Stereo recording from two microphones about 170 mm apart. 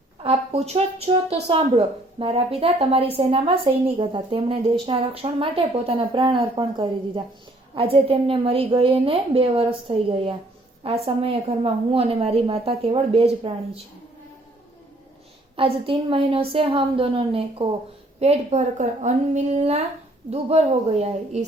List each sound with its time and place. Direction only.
0.2 s speech: 35° right (ahead or behind)
15.5 s a woman's voice: 30° right (ahead or behind)